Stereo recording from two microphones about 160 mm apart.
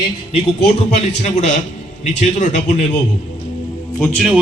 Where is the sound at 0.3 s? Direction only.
40° left (ahead or behind).